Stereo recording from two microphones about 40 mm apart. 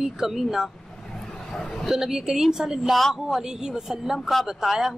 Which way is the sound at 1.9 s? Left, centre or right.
Centre.